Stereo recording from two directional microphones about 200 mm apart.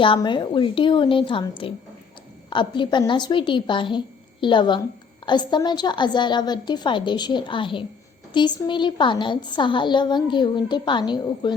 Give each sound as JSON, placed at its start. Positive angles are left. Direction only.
{"t": 0.0, "sound": "a woman's voice", "side_deg": 25}